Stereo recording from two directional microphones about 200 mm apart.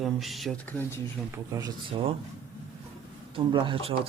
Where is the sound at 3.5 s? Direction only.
25° right (ahead or behind).